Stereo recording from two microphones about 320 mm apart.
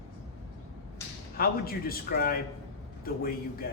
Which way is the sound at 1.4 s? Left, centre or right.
Left.